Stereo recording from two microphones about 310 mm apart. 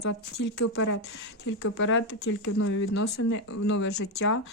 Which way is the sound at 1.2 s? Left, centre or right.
Left.